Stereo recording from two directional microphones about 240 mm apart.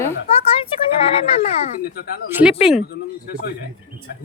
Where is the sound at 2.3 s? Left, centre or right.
Centre.